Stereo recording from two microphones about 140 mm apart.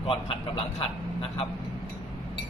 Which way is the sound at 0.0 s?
40° left (ahead or behind).